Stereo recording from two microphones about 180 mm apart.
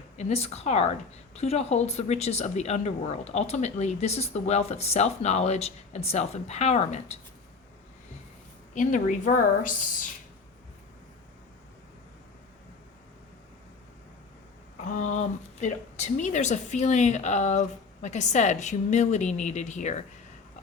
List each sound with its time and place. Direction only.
0.2 s speech: 35° left (ahead or behind)
8.7 s a woman's voice: 45° left (ahead or behind)
14.8 s speech: 45° left (ahead or behind)